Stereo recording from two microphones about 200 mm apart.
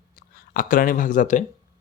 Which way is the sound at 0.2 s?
45° left (ahead or behind).